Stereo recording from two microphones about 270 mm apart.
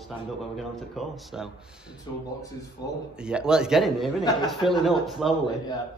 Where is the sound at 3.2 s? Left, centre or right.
Centre.